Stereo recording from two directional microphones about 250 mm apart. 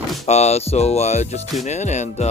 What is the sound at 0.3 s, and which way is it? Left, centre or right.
Speech, left.